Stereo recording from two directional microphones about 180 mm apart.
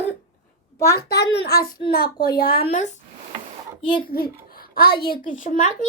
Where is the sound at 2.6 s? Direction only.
40° left (ahead or behind).